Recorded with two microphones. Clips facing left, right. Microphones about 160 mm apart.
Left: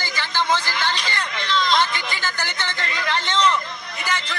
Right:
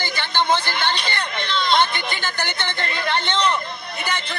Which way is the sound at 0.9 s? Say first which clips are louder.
Right 1 dB; 60° right (ahead or behind).